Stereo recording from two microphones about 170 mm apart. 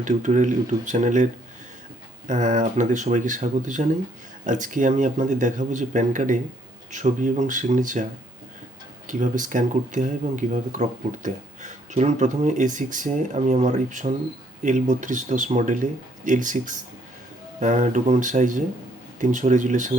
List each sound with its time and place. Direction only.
0.0 s speech: 45° right (ahead or behind)
9.0 s speech: 50° right (ahead or behind)